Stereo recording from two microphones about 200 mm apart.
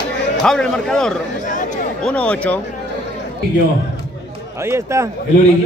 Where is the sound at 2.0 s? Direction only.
5° left (ahead or behind).